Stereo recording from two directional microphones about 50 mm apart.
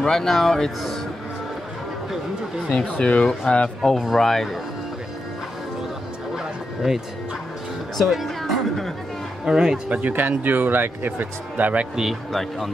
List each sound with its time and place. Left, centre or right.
0.0 s speech: centre
2.7 s speech: centre
3.9 s speech: centre
6.3 s bow-wow: centre
8.0 s chatter: centre
9.4 s speech: centre
9.8 s speech: right
11.9 s speech: centre
12.3 s speech: centre